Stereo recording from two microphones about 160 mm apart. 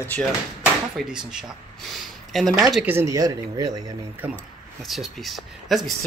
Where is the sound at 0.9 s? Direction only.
5° right (ahead or behind).